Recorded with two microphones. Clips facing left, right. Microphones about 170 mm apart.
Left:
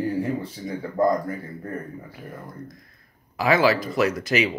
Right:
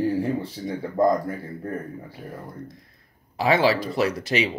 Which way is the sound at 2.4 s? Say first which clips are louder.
Right 1 dB; 30° right (ahead or behind).